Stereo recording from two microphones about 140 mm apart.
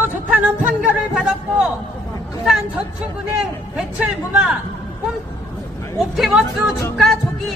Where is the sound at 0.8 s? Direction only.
5° right (ahead or behind).